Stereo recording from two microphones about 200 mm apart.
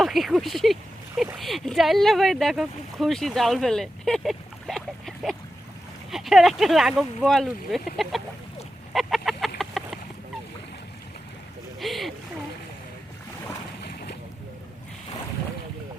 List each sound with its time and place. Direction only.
0.0 s speech: centre (ahead or behind)
8.9 s chicken: centre (ahead or behind)
11.8 s speech: centre (ahead or behind)
13.8 s boat: 50° left (ahead or behind)